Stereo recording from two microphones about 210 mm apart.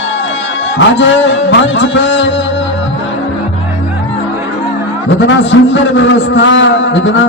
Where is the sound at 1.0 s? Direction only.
60° left (ahead or behind).